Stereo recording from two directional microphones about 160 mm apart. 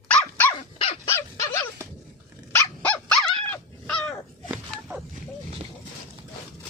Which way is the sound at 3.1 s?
5° left (ahead or behind).